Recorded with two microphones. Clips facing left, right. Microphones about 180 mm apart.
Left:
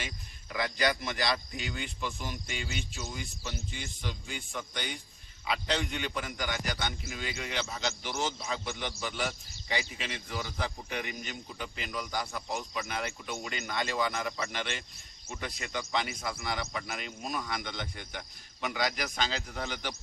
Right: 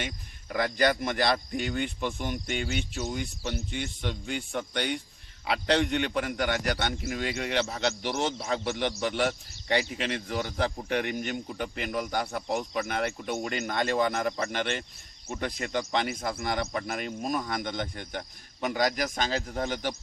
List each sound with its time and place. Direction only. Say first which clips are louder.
0.5 s a man's voice: right 5 dB; 50° right (ahead or behind)